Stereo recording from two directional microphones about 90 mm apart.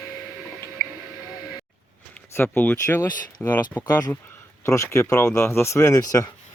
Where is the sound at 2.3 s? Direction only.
20° left (ahead or behind).